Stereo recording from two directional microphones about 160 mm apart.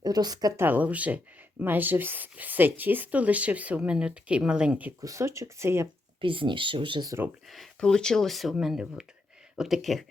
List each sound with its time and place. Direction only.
0.0 s speech: 25° right (ahead or behind)
6.2 s speech: 30° right (ahead or behind)
7.4 s speech: centre (ahead or behind)